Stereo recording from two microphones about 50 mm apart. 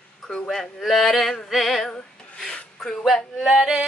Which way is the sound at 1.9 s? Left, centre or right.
Centre.